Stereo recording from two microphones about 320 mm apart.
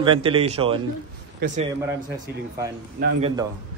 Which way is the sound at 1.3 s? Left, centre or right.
Right.